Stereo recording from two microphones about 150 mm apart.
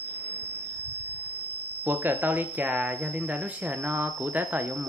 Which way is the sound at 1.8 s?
15° right (ahead or behind).